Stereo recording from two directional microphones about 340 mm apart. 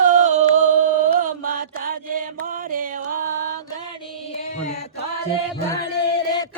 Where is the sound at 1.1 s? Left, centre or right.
Right.